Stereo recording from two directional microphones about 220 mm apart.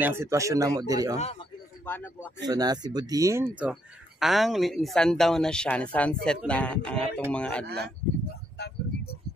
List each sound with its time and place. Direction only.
0.0 s speech: 10° right (ahead or behind)
1.1 s a man's voice: 30° left (ahead or behind)
1.9 s speech: 10° left (ahead or behind)
2.4 s speech: 20° right (ahead or behind); by 7.6 s 5° left (ahead or behind)
7.6 s speech: 50° right (ahead or behind)
8.5 s a sound: 50° left (ahead or behind)